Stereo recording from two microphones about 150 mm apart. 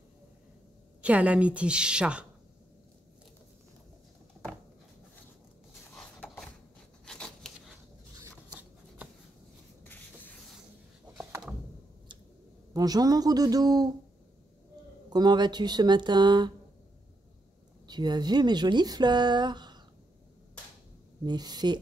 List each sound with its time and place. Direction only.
1.0 s a woman's voice: 10° right (ahead or behind)
5.9 s a sound: centre (ahead or behind)
8.5 s shuffling cards: 10° right (ahead or behind)
9.8 s a sound: 10° left (ahead or behind)
12.7 s speech: 25° right (ahead or behind)
15.0 s speech: 30° right (ahead or behind)
17.8 s speech: 30° right (ahead or behind)
21.2 s speech: 30° right (ahead or behind)